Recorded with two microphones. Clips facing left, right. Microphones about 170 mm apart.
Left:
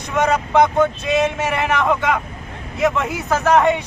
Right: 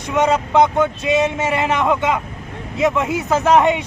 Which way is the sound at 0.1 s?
20° right (ahead or behind).